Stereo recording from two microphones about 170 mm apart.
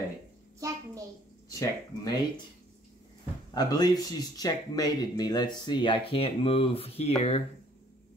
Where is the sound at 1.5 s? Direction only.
20° left (ahead or behind).